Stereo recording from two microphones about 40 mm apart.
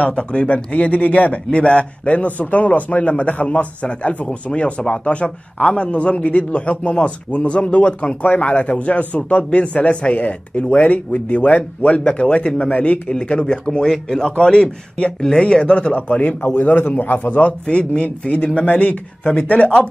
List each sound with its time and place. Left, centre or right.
0.0 s a man's voice: left
13.1 s speech: left
13.8 s speech: centre; by 16.3 s left
16.4 s a man's voice: left